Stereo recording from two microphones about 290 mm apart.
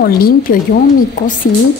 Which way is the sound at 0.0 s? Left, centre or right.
Left.